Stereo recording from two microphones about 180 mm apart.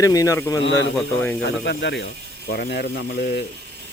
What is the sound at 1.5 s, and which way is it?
Speech, 75° left (ahead or behind).